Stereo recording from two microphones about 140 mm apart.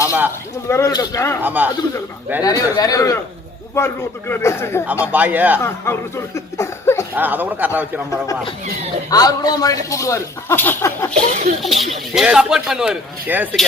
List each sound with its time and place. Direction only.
0.7 s a man's voice: 25° left (ahead or behind)
1.4 s a man's voice: 10° right (ahead or behind)
2.4 s a man's voice: 25° left (ahead or behind)
5.1 s a man's voice: 10° right (ahead or behind)
5.6 s a man's voice: 20° left (ahead or behind)
7.1 s a man's voice: 10° right (ahead or behind)
9.0 s a man's voice: 25° left (ahead or behind)
11.1 s a sound: 55° right (ahead or behind)
11.6 s speech: centre (ahead or behind)